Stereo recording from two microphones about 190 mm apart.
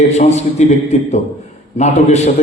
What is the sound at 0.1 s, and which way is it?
A man's voice, 35° left (ahead or behind).